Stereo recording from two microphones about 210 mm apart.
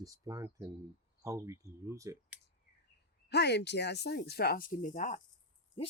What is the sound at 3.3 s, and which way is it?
Speech, 55° left (ahead or behind).